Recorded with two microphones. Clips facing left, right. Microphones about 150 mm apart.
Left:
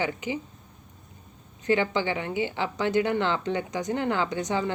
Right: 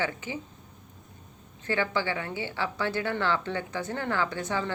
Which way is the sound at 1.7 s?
20° left (ahead or behind).